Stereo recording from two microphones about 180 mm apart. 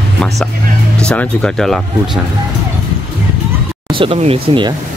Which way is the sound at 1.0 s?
5° left (ahead or behind).